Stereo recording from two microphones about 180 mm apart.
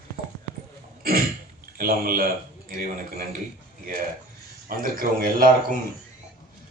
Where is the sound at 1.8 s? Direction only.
55° right (ahead or behind).